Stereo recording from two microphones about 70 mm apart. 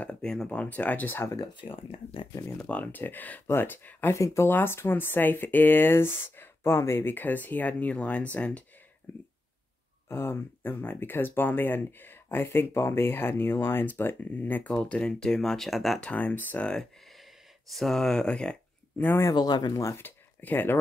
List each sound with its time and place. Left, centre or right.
0.0 s speech: centre; by 1.3 s left
2.6 s speech: left
4.2 s speech: left
4.5 s speech: left
9.1 s speech: left; by 16.0 s centre
16.0 s speech: centre
17.7 s speech: centre
19.0 s speech: left
19.3 s speech: left
19.7 s speech: left
20.0 s speech: left